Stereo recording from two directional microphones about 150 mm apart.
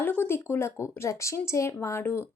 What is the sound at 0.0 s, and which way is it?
Speech, 15° left (ahead or behind).